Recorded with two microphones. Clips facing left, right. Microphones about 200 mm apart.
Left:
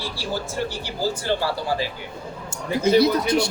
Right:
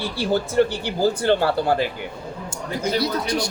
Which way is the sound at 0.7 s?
60° right (ahead or behind).